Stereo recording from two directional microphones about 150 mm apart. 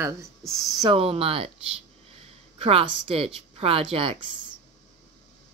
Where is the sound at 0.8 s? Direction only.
40° right (ahead or behind).